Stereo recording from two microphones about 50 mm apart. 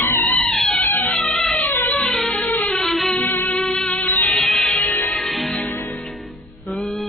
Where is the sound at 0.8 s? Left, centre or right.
Left.